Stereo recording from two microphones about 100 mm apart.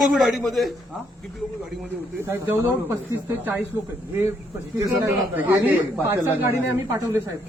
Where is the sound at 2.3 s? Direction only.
25° right (ahead or behind).